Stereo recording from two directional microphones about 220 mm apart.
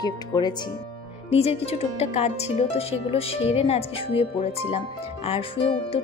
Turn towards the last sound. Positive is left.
turn(degrees=25)  # may be behind; listen again after turning